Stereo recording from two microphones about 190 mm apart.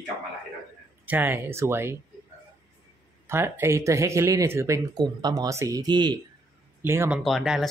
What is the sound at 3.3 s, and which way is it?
Speech, 15° right (ahead or behind).